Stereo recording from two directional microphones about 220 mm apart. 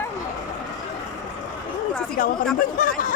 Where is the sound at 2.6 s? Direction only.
40° left (ahead or behind).